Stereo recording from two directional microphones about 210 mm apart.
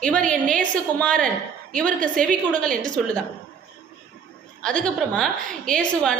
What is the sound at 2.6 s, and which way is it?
Speech, 40° right (ahead or behind).